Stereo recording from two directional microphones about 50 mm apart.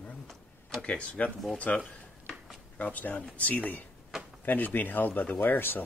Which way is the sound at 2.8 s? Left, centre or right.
Left.